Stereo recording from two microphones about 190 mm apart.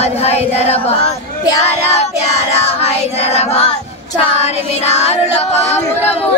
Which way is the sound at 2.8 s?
35° left (ahead or behind).